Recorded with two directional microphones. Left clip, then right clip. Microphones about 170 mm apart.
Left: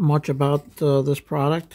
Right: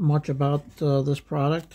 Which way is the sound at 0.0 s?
35° left (ahead or behind).